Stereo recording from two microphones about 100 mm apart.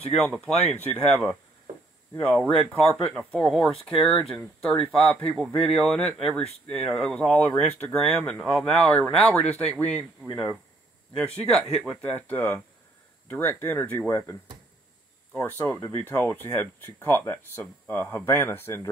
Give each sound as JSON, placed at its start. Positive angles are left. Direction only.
{"t": 0.2, "sound": "speech", "side_deg": 10}
{"t": 11.1, "sound": "speech", "side_deg": 5}
{"t": 15.3, "sound": "speech", "side_deg": 20}